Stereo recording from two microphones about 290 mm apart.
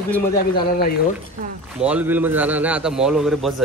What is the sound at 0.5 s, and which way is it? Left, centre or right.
Speech, left.